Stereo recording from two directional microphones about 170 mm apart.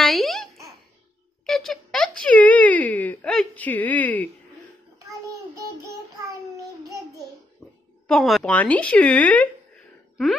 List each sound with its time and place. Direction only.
0.0 s babbling: centre (ahead or behind)
1.4 s a sound: centre (ahead or behind)
5.9 s child singing: 20° right (ahead or behind)
8.1 s speech: centre (ahead or behind)